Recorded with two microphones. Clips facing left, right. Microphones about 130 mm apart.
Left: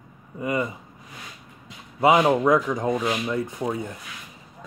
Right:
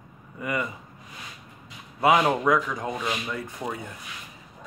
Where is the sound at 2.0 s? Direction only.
15° left (ahead or behind).